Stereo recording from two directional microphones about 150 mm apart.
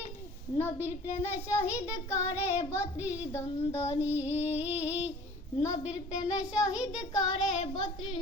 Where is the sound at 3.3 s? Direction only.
20° left (ahead or behind).